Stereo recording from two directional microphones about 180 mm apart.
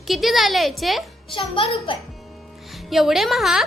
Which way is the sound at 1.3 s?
30° left (ahead or behind).